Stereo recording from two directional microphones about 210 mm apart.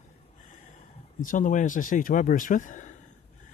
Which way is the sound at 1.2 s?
40° left (ahead or behind).